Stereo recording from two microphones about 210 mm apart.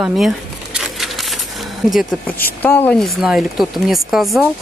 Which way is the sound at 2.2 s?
45° left (ahead or behind).